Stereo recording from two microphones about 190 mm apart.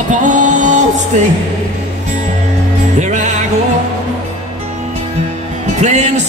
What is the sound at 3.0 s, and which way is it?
Music, 40° right (ahead or behind).